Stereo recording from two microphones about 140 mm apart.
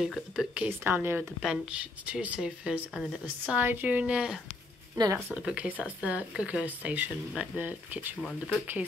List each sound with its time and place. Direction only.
0.0 s speech: 5° right (ahead or behind)
0.7 s speech: 15° right (ahead or behind)
4.9 s speech: 30° right (ahead or behind)
5.3 s speech: 10° right (ahead or behind)
8.2 s speech: centre (ahead or behind)